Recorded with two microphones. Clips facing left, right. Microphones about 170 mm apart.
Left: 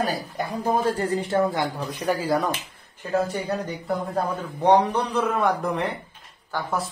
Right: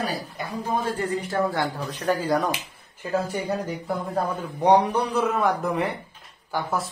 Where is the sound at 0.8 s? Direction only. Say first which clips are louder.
Left 3 dB; 35° left (ahead or behind).